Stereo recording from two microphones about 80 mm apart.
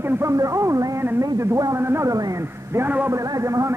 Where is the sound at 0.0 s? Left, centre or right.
Right.